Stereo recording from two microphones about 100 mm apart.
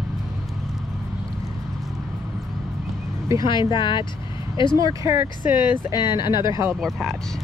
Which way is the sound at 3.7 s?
50° left (ahead or behind).